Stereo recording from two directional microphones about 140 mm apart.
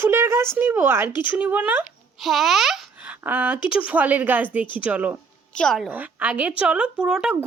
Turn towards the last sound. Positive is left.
turn(degrees=-5)  # may be behind; listen again after turning